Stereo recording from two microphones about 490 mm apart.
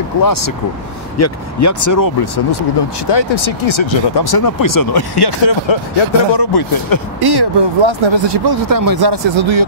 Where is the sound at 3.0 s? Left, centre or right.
Left.